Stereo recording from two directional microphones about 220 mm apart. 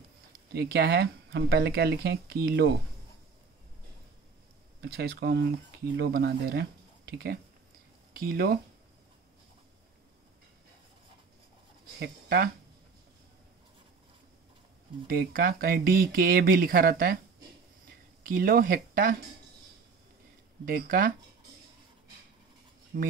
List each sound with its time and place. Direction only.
0.5 s speech: 45° right (ahead or behind)
4.8 s speech: 45° right (ahead or behind)
12.0 s speech: 45° right (ahead or behind)
15.0 s speech: 40° right (ahead or behind)
18.2 s speech: 40° right (ahead or behind)
20.6 s speech: 40° right (ahead or behind)
22.9 s speech: 40° right (ahead or behind)